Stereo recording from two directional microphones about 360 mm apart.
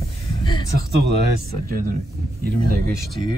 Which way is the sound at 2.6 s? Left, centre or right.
Right.